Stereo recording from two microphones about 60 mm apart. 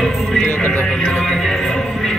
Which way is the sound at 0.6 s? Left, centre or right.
Left.